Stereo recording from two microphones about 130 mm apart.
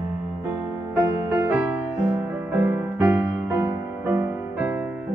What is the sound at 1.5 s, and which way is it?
Music, 10° right (ahead or behind).